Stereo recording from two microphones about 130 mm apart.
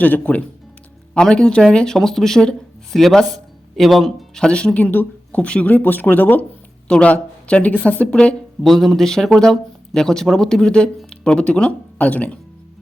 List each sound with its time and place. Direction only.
0.0 s speech: 10° left (ahead or behind)